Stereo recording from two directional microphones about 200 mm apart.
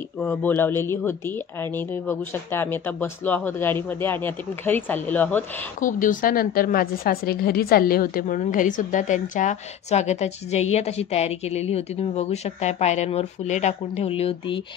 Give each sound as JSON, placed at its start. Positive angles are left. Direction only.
{"t": 0.2, "sound": "speech", "side_deg": 10}
{"t": 5.8, "sound": "a woman's voice", "side_deg": 40}